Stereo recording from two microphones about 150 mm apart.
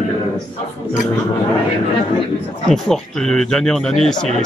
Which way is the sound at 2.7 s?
5° left (ahead or behind).